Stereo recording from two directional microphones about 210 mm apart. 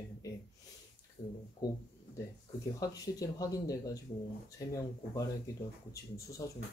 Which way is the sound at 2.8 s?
15° left (ahead or behind).